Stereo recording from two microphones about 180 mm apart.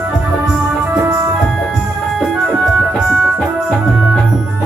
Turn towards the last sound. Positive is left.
turn(degrees=-5)  # may be behind; listen again after turning